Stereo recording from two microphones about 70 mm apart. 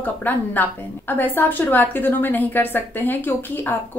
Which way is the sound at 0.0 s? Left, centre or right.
Left.